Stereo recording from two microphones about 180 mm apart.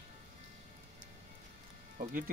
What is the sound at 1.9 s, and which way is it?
Speech, 50° right (ahead or behind).